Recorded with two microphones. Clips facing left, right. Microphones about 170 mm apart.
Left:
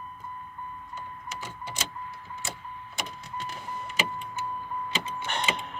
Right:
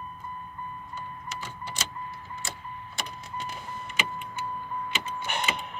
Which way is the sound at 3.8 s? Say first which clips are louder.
Left 2 dB; 40° left (ahead or behind).